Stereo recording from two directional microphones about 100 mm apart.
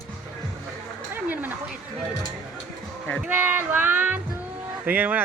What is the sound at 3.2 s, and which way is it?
Music, 15° right (ahead or behind).